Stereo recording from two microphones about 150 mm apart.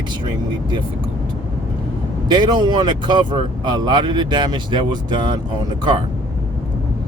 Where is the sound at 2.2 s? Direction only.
30° right (ahead or behind).